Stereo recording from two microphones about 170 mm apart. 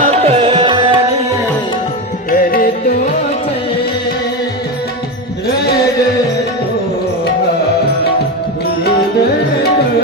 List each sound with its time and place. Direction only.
0.0 s tabla: 40° right (ahead or behind)
2.3 s music: 60° left (ahead or behind)